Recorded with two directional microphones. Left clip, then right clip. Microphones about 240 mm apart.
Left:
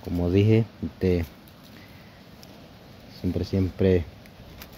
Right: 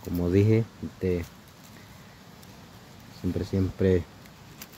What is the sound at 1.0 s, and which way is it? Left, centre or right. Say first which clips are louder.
Speech: left 4 dB; centre.